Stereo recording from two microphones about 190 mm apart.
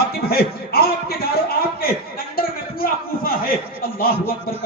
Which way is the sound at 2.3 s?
50° left (ahead or behind).